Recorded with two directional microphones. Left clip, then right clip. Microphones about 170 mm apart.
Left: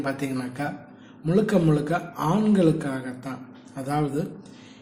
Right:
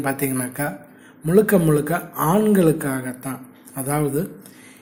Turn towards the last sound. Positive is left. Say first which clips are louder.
# right 4 dB
turn(degrees=-30)  # may be behind; listen again after turning